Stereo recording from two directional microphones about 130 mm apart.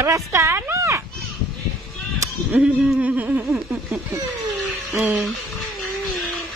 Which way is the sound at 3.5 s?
Centre (ahead or behind).